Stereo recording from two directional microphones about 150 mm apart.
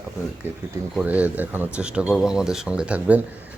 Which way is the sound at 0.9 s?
10° right (ahead or behind).